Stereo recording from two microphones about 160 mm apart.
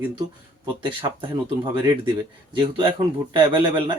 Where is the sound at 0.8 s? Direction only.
30° right (ahead or behind).